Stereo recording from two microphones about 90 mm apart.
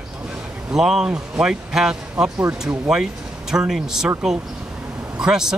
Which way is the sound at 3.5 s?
5° right (ahead or behind).